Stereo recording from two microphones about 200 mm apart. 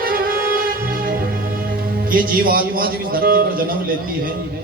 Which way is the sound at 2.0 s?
45° right (ahead or behind).